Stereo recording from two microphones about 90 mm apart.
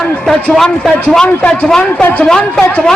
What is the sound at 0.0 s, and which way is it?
A man's voice, 5° left (ahead or behind).